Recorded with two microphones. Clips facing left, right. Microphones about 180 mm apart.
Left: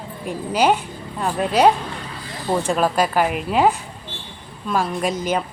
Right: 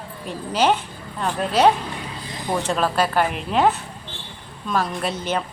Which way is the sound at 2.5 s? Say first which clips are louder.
Left 3 dB; 10° left (ahead or behind).